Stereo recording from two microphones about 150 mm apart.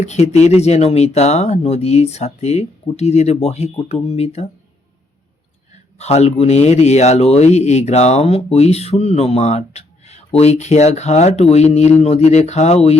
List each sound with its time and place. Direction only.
0.0 s speech: 50° left (ahead or behind)
6.0 s speech: 45° left (ahead or behind)